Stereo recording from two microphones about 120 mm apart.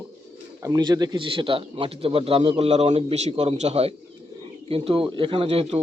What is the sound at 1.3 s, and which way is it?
A man's voice, 45° right (ahead or behind).